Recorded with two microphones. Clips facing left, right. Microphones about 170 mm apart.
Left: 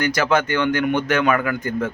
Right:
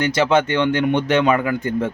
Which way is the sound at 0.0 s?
25° right (ahead or behind).